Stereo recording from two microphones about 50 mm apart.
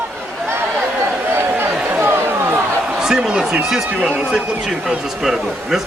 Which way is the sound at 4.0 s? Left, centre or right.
Centre.